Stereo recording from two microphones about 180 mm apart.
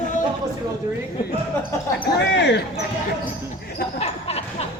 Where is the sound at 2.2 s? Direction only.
70° left (ahead or behind).